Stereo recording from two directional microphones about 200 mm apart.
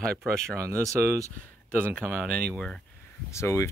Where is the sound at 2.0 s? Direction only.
5° left (ahead or behind).